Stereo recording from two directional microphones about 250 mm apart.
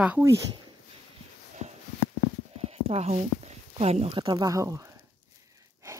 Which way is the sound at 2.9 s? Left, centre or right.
Right.